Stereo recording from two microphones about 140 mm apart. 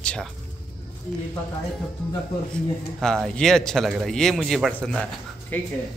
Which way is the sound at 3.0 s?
5° left (ahead or behind).